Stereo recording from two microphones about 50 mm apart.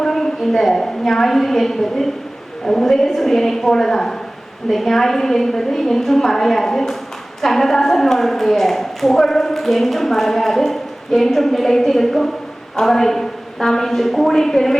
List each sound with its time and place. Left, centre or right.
0.0 s a woman's voice: centre